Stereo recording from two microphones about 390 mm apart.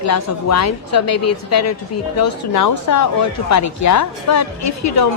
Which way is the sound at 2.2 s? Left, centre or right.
Left.